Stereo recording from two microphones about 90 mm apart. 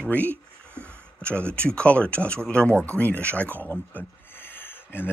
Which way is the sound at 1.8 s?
15° left (ahead or behind).